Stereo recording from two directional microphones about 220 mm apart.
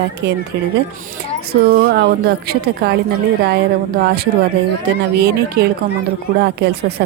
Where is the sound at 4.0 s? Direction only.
45° right (ahead or behind).